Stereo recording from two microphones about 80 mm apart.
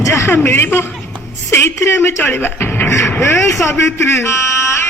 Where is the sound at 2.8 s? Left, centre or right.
Left.